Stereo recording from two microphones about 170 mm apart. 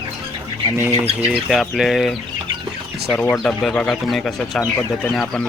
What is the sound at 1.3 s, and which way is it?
Speech, centre (ahead or behind).